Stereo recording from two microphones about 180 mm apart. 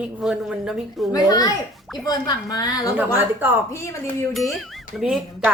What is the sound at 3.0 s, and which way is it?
Speech, 10° right (ahead or behind).